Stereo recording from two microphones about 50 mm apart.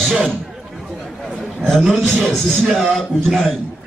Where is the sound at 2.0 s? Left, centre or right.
Centre.